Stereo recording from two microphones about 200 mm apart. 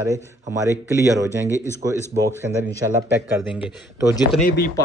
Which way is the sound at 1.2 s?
15° left (ahead or behind).